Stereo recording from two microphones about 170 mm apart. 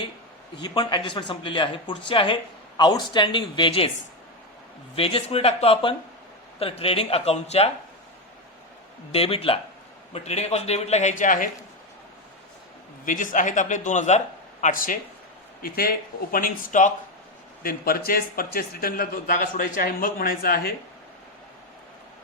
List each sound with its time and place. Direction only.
0.6 s speech: 25° left (ahead or behind)
4.9 s a man's voice: 35° left (ahead or behind)
9.1 s a man's voice: 35° left (ahead or behind)
13.1 s speech: 50° left (ahead or behind)